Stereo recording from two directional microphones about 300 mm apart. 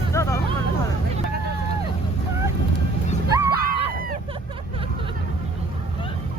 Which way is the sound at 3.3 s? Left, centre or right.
Centre.